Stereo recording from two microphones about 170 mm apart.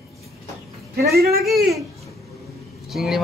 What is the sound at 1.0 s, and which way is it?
Speech, 65° right (ahead or behind).